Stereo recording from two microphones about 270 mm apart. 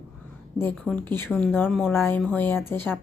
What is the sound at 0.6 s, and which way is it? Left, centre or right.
Speech, centre.